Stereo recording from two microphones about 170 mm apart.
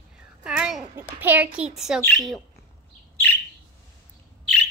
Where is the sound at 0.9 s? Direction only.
10° right (ahead or behind).